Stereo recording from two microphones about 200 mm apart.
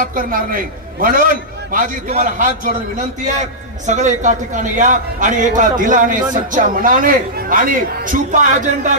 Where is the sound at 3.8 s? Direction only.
35° right (ahead or behind).